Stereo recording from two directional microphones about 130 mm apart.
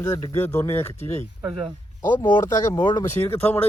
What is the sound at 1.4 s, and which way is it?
Speech, centre (ahead or behind).